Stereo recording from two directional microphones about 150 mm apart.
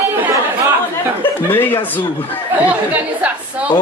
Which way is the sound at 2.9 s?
10° right (ahead or behind).